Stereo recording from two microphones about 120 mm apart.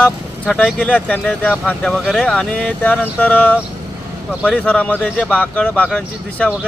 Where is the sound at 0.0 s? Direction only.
10° left (ahead or behind).